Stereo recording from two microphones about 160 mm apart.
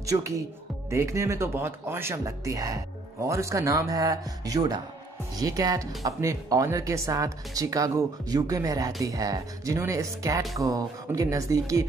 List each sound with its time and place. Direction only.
0.0 s speech: 20° right (ahead or behind)